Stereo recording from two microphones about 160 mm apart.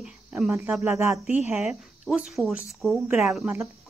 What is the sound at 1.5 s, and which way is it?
Speech, 5° right (ahead or behind).